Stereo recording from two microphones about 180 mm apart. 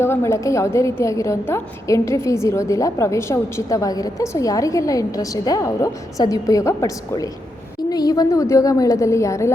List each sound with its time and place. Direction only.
0.0 s a woman's voice: 15° left (ahead or behind)